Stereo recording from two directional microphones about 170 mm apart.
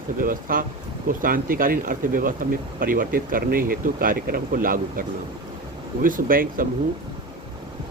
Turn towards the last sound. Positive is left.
turn(degrees=-55)  # may be behind; listen again after turning